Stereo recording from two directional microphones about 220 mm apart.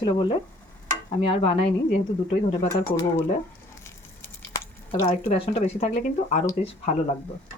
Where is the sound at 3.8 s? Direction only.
10° left (ahead or behind).